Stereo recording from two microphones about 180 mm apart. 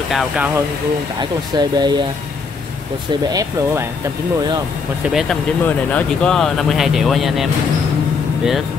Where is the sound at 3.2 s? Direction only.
20° right (ahead or behind).